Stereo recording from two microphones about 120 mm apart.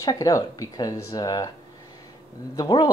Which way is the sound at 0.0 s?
30° left (ahead or behind).